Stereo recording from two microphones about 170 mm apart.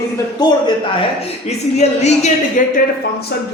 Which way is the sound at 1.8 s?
40° left (ahead or behind).